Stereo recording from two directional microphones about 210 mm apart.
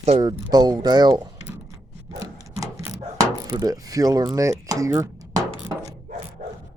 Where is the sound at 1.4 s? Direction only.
15° right (ahead or behind).